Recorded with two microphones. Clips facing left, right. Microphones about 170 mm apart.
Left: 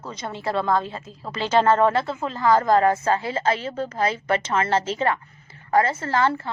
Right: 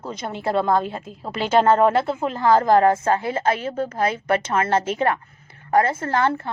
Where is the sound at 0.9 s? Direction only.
55° right (ahead or behind).